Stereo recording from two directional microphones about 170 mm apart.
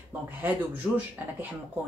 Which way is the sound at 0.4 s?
10° right (ahead or behind).